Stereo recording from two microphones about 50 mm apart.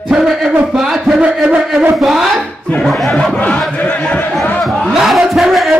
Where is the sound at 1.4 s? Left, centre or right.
Right.